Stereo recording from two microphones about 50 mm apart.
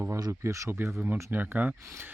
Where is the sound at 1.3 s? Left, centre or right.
Right.